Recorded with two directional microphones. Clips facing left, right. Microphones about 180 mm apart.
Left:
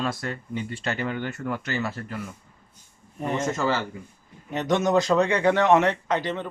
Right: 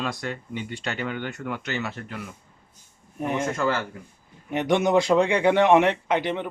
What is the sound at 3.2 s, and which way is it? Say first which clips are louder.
Speech: even; 10° right (ahead or behind).